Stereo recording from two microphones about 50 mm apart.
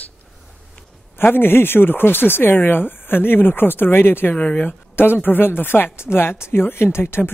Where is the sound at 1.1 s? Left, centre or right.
Left.